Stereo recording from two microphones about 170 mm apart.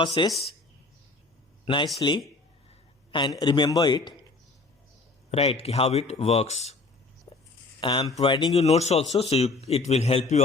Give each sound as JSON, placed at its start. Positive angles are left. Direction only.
{"t": 0.0, "sound": "a man's voice", "side_deg": 25}
{"t": 1.6, "sound": "speech", "side_deg": 30}
{"t": 3.1, "sound": "a man's voice", "side_deg": 25}
{"t": 5.3, "sound": "a man's voice", "side_deg": 35}
{"t": 7.3, "sound": "a sound", "side_deg": 25}
{"t": 7.8, "sound": "a man's voice", "side_deg": 25}
{"t": 8.5, "sound": "a man's voice", "side_deg": 40}